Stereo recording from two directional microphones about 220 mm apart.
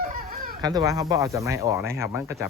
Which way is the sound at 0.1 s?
40° right (ahead or behind).